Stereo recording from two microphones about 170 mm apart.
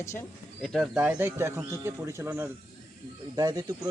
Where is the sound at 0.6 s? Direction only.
Centre (ahead or behind).